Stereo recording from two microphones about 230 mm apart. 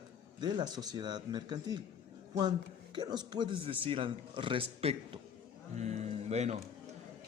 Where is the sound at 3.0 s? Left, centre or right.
Centre.